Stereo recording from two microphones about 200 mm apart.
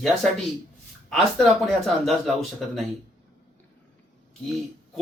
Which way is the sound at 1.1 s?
Centre (ahead or behind).